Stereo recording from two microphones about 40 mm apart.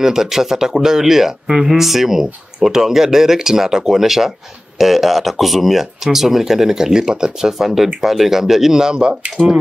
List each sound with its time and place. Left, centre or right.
0.0 s speech: centre
7.5 s speech: centre
9.4 s speech: left